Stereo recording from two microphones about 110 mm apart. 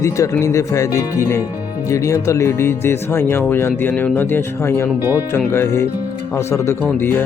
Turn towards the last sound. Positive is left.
turn(degrees=20)  # may be behind; listen again after turning